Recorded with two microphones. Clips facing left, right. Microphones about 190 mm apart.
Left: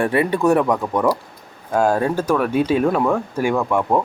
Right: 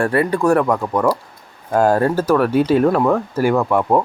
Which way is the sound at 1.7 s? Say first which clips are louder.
Right 3 dB; 10° right (ahead or behind).